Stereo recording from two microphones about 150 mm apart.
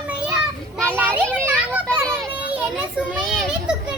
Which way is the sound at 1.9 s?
10° right (ahead or behind).